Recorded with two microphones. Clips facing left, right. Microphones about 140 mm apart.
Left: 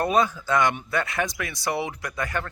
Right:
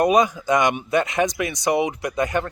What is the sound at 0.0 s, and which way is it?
Speech, 15° right (ahead or behind).